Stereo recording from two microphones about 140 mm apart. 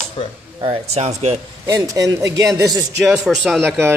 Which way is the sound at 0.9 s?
50° right (ahead or behind).